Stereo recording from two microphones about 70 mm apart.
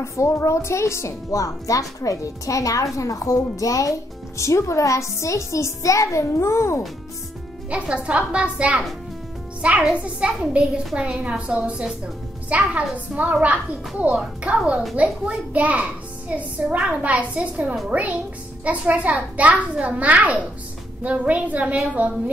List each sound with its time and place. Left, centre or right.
0.0 s speech: left
7.7 s a child's voice: centre